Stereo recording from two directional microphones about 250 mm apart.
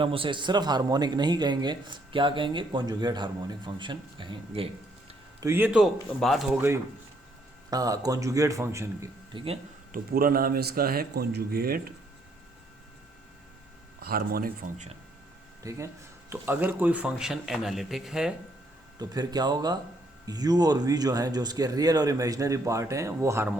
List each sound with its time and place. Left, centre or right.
0.0 s a man's voice: right
5.4 s a man's voice: centre
9.9 s a man's voice: right
14.0 s a man's voice: right
15.6 s a man's voice: centre
18.9 s a man's voice: centre